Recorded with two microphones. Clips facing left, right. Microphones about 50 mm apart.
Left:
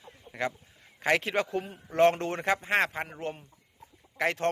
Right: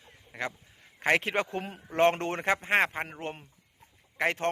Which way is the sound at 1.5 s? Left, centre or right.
Right.